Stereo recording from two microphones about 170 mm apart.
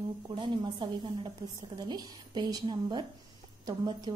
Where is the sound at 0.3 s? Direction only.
25° right (ahead or behind).